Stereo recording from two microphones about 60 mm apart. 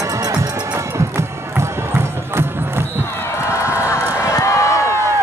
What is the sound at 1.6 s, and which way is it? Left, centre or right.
Music, right.